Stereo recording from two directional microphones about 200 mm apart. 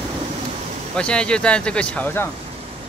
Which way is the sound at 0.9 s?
5° left (ahead or behind).